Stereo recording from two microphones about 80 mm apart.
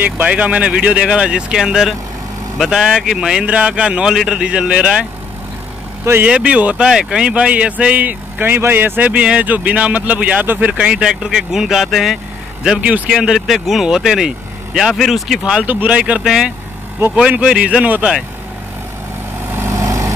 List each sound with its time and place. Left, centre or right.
0.0 s speech: centre
6.2 s speech: centre
15.6 s speech: right
19.5 s vehicle: right